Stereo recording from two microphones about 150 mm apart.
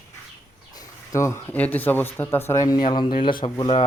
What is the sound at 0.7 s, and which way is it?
Speech, 20° left (ahead or behind).